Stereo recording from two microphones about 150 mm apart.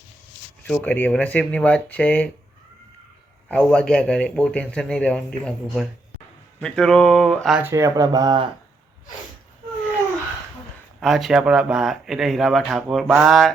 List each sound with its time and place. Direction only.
0.6 s speech: 10° left (ahead or behind)
3.5 s speech: 5° left (ahead or behind)
7.6 s speech: 20° right (ahead or behind)
11.0 s speech: centre (ahead or behind)